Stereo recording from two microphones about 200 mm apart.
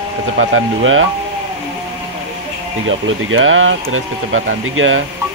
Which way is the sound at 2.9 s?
80° right.